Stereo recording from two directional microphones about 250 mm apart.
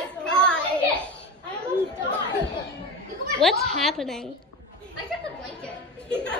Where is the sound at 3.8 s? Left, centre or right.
Centre.